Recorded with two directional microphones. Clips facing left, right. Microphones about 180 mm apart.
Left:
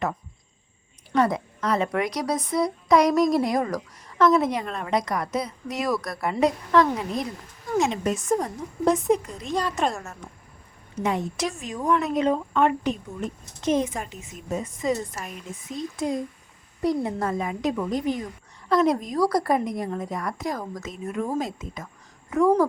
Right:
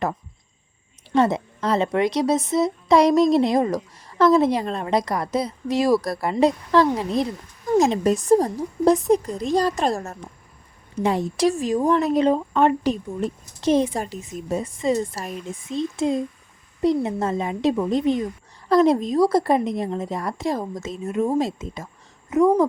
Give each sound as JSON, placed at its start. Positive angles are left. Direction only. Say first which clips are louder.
{"t": 1.1, "sound": "a woman's voice", "louder": "right 3 dB", "side_deg": -25}